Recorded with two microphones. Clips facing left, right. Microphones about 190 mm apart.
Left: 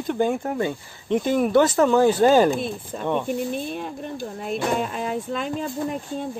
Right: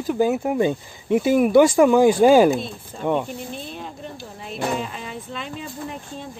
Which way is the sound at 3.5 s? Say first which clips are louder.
Left 5 dB; 55° left (ahead or behind).